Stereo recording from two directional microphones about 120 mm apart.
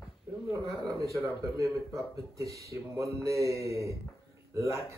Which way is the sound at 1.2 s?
30° right (ahead or behind).